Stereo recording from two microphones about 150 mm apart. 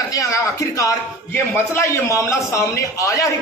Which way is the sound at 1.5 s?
20° left (ahead or behind).